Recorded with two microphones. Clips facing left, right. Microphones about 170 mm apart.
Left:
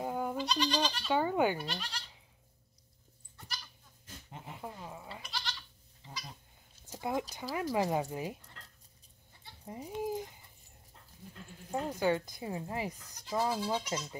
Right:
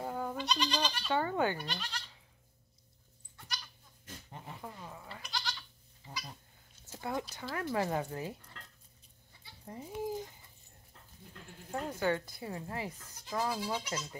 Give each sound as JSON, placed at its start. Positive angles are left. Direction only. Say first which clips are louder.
{"t": 0.0, "sound": "goat", "louder": "left 2 dB", "side_deg": 15}
{"t": 0.4, "sound": "speech", "louder": "left 1 dB", "side_deg": 5}
{"t": 4.3, "sound": "speech", "louder": "left 2 dB", "side_deg": 15}
{"t": 5.3, "sound": "goat", "louder": "right 2 dB", "side_deg": 0}
{"t": 6.9, "sound": "speech", "louder": "left 3 dB", "side_deg": 15}
{"t": 9.7, "sound": "speech", "louder": "left 1 dB", "side_deg": 15}
{"t": 11.7, "sound": "speech", "louder": "left 2 dB", "side_deg": 15}